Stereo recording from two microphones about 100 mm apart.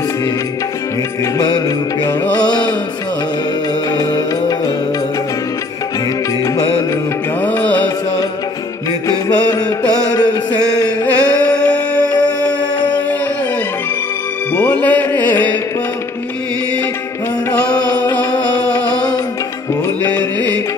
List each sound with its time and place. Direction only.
2.3 s music: 45° left (ahead or behind)
3.9 s music: 40° left (ahead or behind)
7.4 s music: 15° left (ahead or behind)
10.7 s music: 45° left (ahead or behind)
11.4 s music: 10° left (ahead or behind)
12.4 s a sound: 45° left (ahead or behind)
14.5 s music: 15° left (ahead or behind)
17.5 s music: 15° left (ahead or behind)
20.0 s music: 15° left (ahead or behind)